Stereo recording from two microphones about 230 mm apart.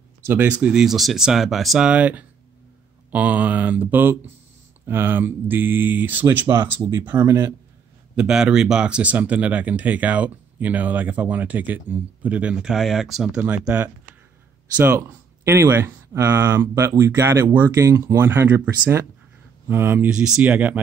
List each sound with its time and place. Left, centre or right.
0.3 s speech: centre